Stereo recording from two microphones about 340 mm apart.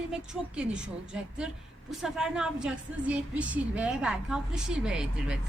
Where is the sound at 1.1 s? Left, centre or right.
Centre.